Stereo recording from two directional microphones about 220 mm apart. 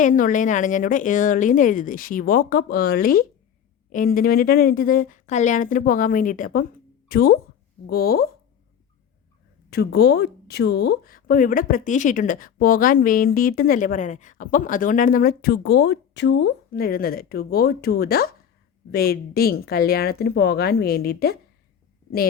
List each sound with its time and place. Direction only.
0.0 s speech: 35° left (ahead or behind)
9.6 s speech: 45° left (ahead or behind)